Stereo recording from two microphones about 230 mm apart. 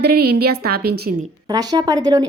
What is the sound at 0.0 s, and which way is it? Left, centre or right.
A woman's voice, right.